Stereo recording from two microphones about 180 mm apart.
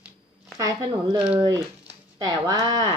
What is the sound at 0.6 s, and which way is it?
Speech, 20° right (ahead or behind).